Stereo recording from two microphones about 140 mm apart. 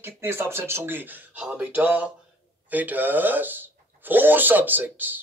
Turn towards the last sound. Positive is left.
turn(degrees=-15)  # may be behind; listen again after turning